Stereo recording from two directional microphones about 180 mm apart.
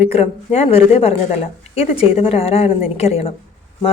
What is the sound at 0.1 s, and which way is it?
Speech, 35° left (ahead or behind).